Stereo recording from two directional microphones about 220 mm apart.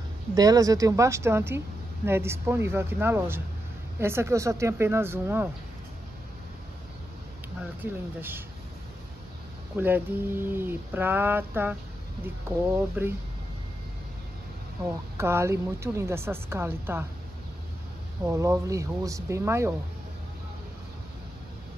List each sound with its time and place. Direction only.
0.3 s speech: 15° right (ahead or behind)
7.8 s speech: 10° right (ahead or behind)
9.8 s speech: 10° right (ahead or behind)
15.1 s speech: 10° right (ahead or behind)
18.2 s speech: 15° right (ahead or behind)